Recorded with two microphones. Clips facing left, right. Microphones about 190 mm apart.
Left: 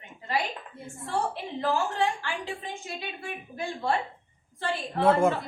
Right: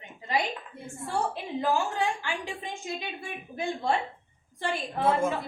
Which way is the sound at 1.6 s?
15° right (ahead or behind).